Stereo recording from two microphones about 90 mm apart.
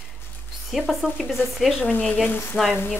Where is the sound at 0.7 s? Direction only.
Centre (ahead or behind).